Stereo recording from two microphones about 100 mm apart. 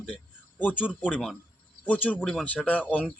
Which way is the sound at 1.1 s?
5° left (ahead or behind).